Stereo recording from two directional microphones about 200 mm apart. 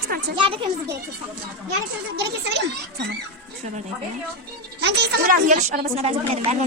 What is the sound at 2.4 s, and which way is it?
Speech, 60° right (ahead or behind).